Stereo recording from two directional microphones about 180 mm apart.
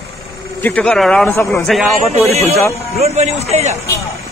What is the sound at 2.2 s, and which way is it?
A man's voice, 35° right (ahead or behind).